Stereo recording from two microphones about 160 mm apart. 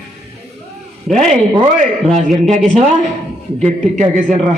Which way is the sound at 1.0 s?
Centre (ahead or behind).